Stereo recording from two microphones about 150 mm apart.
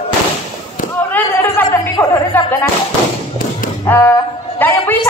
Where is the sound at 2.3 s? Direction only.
10° left (ahead or behind).